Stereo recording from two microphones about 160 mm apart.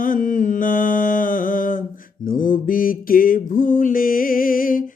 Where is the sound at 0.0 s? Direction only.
55° left (ahead or behind).